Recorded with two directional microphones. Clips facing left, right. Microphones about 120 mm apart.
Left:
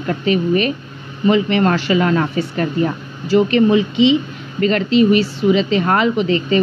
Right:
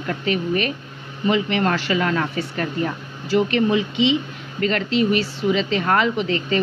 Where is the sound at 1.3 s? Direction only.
35° left (ahead or behind).